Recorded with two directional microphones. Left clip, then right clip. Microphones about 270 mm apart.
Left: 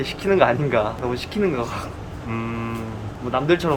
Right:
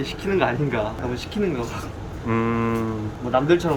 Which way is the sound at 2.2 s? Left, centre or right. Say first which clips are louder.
Right 6 dB; centre.